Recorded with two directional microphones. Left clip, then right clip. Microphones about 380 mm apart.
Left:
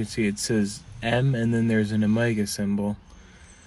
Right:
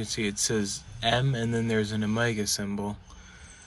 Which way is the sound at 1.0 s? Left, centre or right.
Right.